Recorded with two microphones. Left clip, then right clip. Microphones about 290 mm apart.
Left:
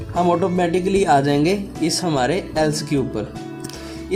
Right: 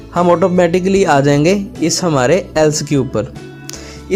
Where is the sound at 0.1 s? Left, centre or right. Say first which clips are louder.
Right 7 dB; right.